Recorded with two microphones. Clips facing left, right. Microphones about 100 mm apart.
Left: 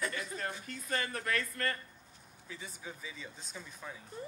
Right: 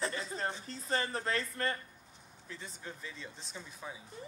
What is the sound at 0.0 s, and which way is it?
Speech, 30° right (ahead or behind).